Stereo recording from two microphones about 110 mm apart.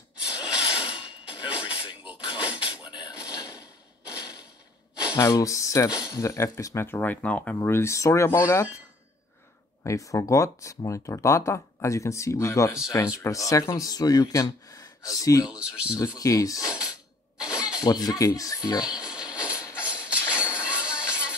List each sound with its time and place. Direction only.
0.3 s a sound: 10° right (ahead or behind)
2.0 s a sound: 10° right (ahead or behind)
2.7 s dishes: 45° left (ahead or behind)
5.1 s speech: 30° left (ahead or behind)
5.9 s speech: 5° right (ahead or behind)
6.1 s speech: 30° left (ahead or behind); by 7.5 s 10° left (ahead or behind)
7.6 s speech: 25° left (ahead or behind)
9.8 s speech: 30° left (ahead or behind)
15.4 s speech: 10° right (ahead or behind)
16.0 s speech: 30° left (ahead or behind)
17.4 s a sound: 10° right (ahead or behind)
17.7 s speech: 35° left (ahead or behind)
18.9 s a sound: 5° right (ahead or behind)